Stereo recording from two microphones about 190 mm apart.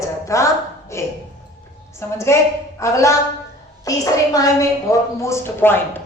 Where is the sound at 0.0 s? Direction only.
15° left (ahead or behind).